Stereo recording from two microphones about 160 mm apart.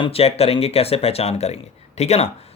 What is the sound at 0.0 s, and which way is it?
Speech, 40° left (ahead or behind).